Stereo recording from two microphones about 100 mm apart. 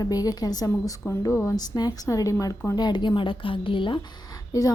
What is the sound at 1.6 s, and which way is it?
Speech, 40° left (ahead or behind).